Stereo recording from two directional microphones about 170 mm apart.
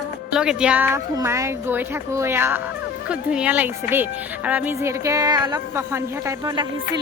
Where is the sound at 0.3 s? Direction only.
5° right (ahead or behind).